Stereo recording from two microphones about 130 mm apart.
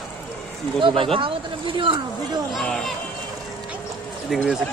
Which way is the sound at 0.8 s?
40° right (ahead or behind).